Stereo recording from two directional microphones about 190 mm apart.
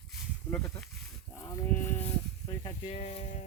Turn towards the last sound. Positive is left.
turn(degrees=40)  # may be behind; listen again after turning